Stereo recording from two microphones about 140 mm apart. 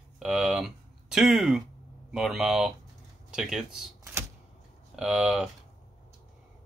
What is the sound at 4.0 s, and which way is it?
Typewriter, 20° right (ahead or behind).